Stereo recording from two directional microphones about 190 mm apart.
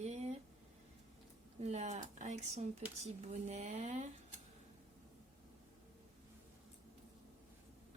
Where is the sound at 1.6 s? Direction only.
35° right (ahead or behind).